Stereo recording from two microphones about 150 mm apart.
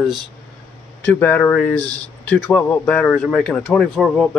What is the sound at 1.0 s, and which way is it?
Speech, 10° left (ahead or behind).